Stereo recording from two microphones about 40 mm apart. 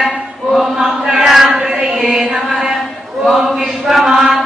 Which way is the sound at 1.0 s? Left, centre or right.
Centre.